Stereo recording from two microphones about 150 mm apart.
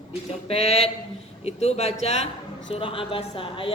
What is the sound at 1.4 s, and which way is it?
A woman's voice, 45° left (ahead or behind).